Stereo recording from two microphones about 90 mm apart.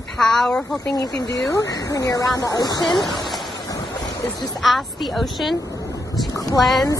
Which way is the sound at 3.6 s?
45° left (ahead or behind).